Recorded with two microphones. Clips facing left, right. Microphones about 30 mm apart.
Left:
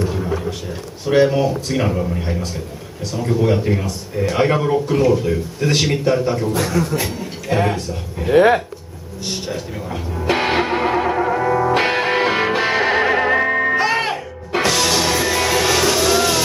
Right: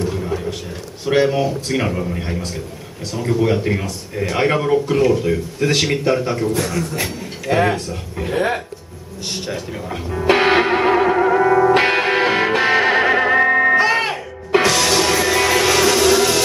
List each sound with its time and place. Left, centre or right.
0.0 s a sound: centre
1.0 s a man's voice: centre
7.4 s speech: centre
8.3 s speech: centre
9.3 s speech: centre
10.1 s music: centre